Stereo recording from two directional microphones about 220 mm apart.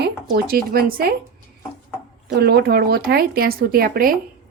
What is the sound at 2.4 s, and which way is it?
Speech, 45° right (ahead or behind).